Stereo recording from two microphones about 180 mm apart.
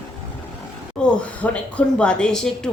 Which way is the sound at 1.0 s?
5° left (ahead or behind).